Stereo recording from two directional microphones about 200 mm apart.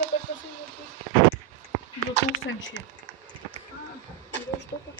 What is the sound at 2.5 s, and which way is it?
Speech, 70° left (ahead or behind).